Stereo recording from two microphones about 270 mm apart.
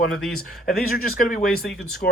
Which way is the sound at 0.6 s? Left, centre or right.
Left.